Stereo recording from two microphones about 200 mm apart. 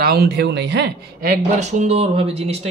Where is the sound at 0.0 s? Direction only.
50° right (ahead or behind).